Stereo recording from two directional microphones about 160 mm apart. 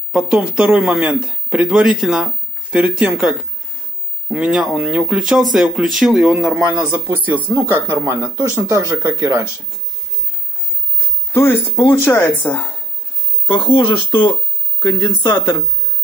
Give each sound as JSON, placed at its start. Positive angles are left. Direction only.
{"t": 0.1, "sound": "a man's voice", "side_deg": -5}
{"t": 4.3, "sound": "a man's voice", "side_deg": -5}
{"t": 11.3, "sound": "speech", "side_deg": 15}
{"t": 13.5, "sound": "speech", "side_deg": 30}